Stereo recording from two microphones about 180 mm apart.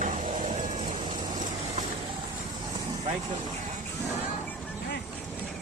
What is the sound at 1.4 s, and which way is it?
Vehicle, 40° right (ahead or behind).